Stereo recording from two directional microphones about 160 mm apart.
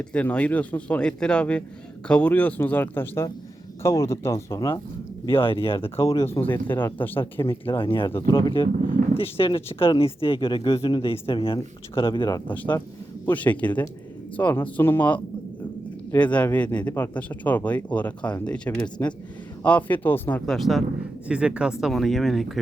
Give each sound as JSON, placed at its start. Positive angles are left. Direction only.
{"t": 0.0, "sound": "speech", "side_deg": 10}
{"t": 5.4, "sound": "speech", "side_deg": 35}
{"t": 6.0, "sound": "speech", "side_deg": 20}
{"t": 7.6, "sound": "speech", "side_deg": 35}
{"t": 12.5, "sound": "speech", "side_deg": 10}